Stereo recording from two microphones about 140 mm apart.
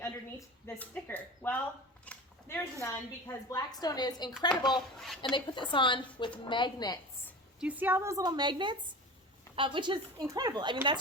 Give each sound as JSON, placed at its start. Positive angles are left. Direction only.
{"t": 0.0, "sound": "a woman's voice", "side_deg": 15}
{"t": 2.1, "sound": "a sound", "side_deg": 10}
{"t": 2.5, "sound": "a woman's voice", "side_deg": 15}
{"t": 4.9, "sound": "a woman's voice", "side_deg": 0}
{"t": 5.3, "sound": "a woman's voice", "side_deg": 35}
{"t": 7.6, "sound": "a woman's voice", "side_deg": -10}